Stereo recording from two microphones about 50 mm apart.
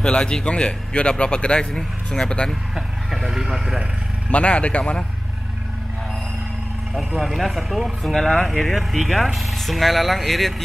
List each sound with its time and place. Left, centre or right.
0.0 s a man's voice: centre
2.7 s speech: centre
4.3 s a man's voice: left
7.2 s speech: centre